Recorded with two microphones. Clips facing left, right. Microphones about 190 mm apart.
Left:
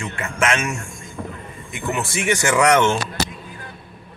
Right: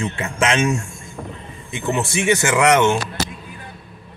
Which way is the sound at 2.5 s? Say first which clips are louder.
Left 1 dB; 5° right (ahead or behind).